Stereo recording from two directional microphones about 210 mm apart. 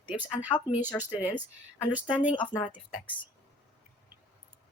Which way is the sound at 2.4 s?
20° left (ahead or behind).